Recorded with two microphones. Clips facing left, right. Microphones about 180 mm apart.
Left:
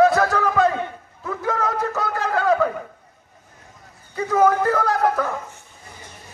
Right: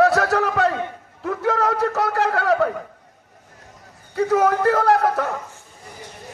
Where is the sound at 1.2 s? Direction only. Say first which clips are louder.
Right 3 dB; 70° right (ahead or behind).